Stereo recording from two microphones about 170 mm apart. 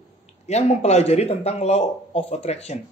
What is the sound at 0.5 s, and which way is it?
A man's voice, 40° left (ahead or behind).